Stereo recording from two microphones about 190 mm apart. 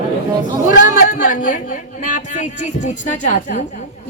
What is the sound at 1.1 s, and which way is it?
A woman's voice, 45° left (ahead or behind).